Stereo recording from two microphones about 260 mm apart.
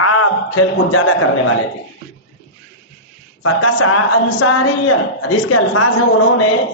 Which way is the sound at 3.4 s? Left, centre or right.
Left.